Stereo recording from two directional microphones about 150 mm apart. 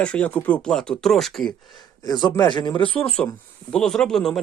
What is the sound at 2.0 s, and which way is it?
Speech, 30° left (ahead or behind).